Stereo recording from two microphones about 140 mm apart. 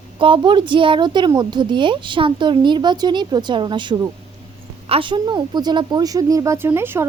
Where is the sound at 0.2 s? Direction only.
35° right (ahead or behind).